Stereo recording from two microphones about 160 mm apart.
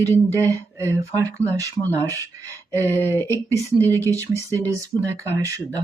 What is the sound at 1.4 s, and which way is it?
Speech, 15° left (ahead or behind).